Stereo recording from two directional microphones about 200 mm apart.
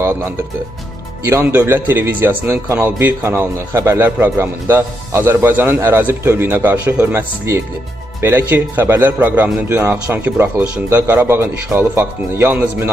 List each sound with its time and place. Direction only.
0.0 s speech: 15° right (ahead or behind)